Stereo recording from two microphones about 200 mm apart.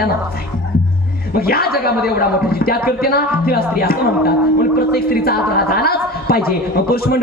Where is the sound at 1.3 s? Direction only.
50° left (ahead or behind).